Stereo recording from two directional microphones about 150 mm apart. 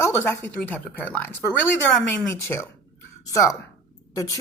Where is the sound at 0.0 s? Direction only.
10° left (ahead or behind).